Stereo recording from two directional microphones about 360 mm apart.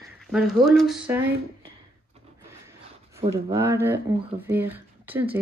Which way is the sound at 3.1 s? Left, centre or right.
Centre.